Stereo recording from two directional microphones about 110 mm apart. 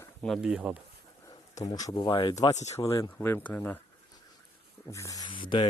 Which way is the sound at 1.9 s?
45° left (ahead or behind).